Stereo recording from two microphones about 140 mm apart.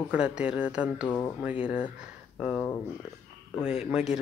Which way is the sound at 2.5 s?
20° left (ahead or behind).